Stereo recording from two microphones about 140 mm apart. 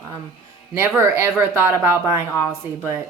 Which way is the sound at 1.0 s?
20° right (ahead or behind).